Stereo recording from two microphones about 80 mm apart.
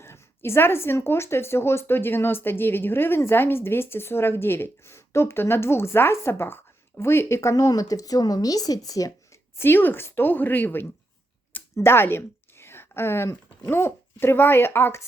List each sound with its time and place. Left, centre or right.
0.0 s speech: left
7.5 s speech: left
9.6 s a woman's voice: left